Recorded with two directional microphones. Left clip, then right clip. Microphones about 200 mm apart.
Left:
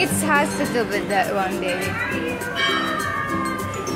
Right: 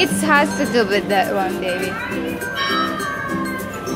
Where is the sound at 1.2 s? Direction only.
10° right (ahead or behind).